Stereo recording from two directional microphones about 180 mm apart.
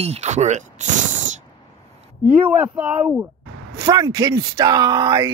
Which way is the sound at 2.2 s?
10° right (ahead or behind).